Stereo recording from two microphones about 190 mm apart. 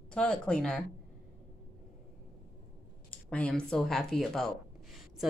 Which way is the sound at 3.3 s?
5° left (ahead or behind).